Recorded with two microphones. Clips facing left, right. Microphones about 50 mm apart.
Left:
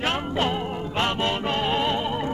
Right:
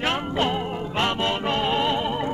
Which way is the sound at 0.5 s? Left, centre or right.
Centre.